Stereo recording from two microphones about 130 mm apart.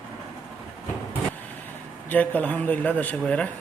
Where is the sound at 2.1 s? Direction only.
10° left (ahead or behind).